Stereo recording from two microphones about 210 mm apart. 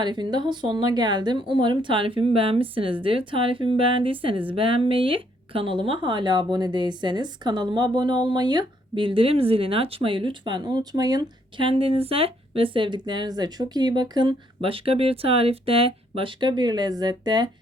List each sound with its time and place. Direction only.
0.0 s speech: 20° right (ahead or behind)